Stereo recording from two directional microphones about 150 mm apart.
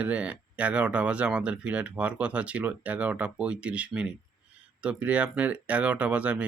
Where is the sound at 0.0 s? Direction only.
10° right (ahead or behind).